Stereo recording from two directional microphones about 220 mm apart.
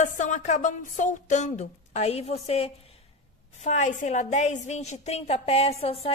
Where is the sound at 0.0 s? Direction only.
35° left (ahead or behind).